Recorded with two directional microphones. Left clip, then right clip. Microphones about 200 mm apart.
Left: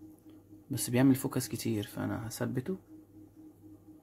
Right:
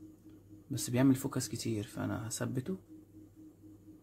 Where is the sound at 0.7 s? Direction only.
20° left (ahead or behind).